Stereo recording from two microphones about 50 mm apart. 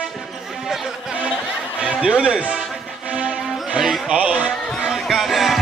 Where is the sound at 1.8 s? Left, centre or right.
Centre.